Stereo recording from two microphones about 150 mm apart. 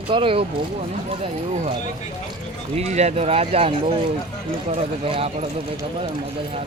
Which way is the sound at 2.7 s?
45° right (ahead or behind).